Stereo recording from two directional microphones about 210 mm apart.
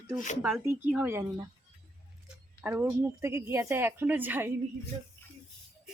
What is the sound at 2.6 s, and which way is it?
A woman's voice, 10° right (ahead or behind).